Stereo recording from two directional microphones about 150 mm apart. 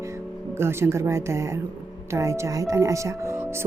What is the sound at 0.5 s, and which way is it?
A woman's voice, 15° right (ahead or behind).